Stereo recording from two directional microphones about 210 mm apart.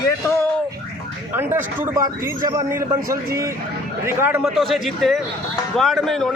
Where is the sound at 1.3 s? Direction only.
10° right (ahead or behind).